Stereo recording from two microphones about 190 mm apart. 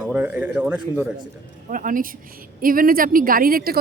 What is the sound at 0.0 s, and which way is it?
A man's voice, 5° right (ahead or behind).